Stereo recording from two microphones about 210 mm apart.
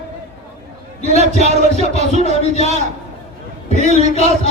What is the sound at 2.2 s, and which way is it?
Speech, 30° left (ahead or behind).